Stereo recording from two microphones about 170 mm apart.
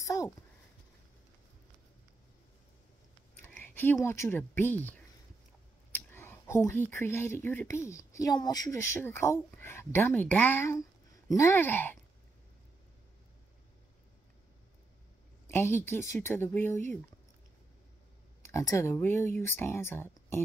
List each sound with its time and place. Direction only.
0.0 s a sound: 20° left (ahead or behind)
3.4 s speech: 10° left (ahead or behind)
15.4 s speech: 15° left (ahead or behind)
18.5 s speech: 20° left (ahead or behind)